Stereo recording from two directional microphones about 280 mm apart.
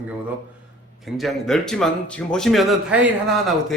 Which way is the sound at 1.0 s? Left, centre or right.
Centre.